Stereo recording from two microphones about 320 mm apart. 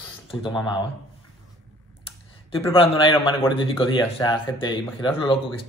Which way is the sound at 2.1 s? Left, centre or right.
Centre.